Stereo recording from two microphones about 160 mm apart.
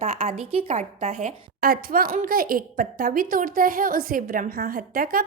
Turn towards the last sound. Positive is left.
turn(degrees=-65)  # may be behind; listen again after turning